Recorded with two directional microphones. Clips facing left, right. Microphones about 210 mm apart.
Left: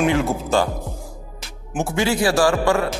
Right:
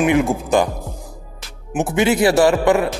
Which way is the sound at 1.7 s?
20° right (ahead or behind).